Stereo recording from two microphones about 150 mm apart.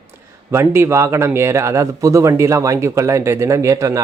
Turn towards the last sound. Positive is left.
turn(degrees=-20)  # may be behind; listen again after turning